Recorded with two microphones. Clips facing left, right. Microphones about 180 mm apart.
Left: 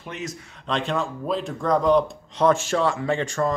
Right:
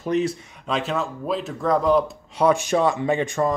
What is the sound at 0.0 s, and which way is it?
Speech, 35° right (ahead or behind).